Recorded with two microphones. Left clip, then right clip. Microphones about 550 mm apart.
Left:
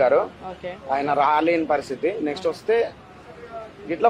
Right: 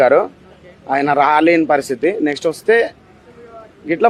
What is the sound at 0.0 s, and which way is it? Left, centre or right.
A man's voice, right.